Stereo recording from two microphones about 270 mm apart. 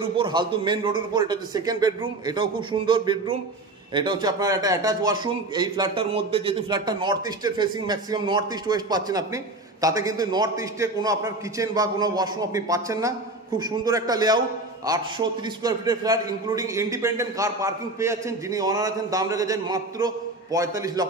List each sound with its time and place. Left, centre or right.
0.0 s a man's voice: centre